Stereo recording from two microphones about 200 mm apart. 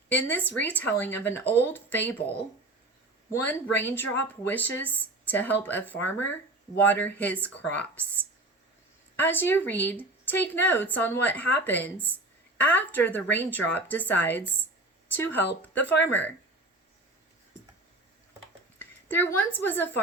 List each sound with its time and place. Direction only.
0.1 s speech: 10° left (ahead or behind)
3.3 s speech: 10° left (ahead or behind)
18.8 s a sound: 10° left (ahead or behind)
19.5 s speech: 10° left (ahead or behind)